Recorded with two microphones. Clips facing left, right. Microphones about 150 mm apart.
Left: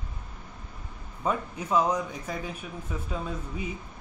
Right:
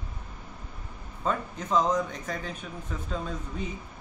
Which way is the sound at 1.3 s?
10° left (ahead or behind).